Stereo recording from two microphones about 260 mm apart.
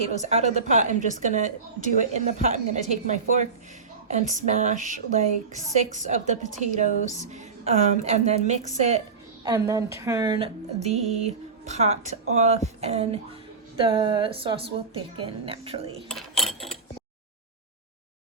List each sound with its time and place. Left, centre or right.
0.0 s speech: right
9.4 s a woman's voice: centre
16.0 s mechanisms: centre